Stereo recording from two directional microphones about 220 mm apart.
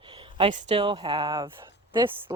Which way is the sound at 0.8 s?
20° right (ahead or behind).